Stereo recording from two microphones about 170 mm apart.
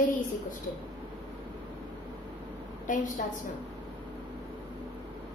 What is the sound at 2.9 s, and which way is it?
Speech, 50° left (ahead or behind).